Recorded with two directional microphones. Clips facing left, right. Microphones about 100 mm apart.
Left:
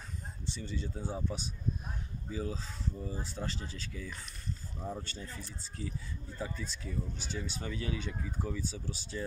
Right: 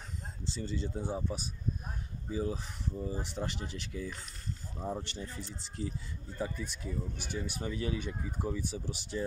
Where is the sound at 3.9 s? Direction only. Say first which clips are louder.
Right 4 dB; 30° right (ahead or behind).